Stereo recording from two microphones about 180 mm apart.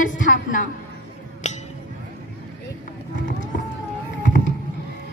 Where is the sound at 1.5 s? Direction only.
40° left (ahead or behind).